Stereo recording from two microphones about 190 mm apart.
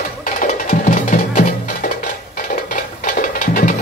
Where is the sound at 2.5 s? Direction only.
45° left (ahead or behind).